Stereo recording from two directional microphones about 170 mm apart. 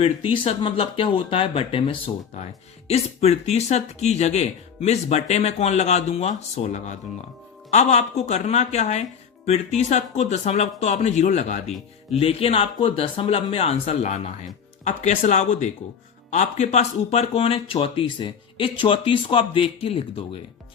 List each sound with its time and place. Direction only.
0.0 s speech: 30° left (ahead or behind)